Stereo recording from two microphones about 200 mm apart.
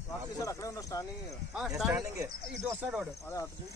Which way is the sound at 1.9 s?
15° right (ahead or behind).